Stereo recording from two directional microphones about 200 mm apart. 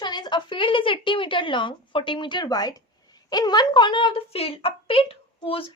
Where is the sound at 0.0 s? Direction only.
20° left (ahead or behind).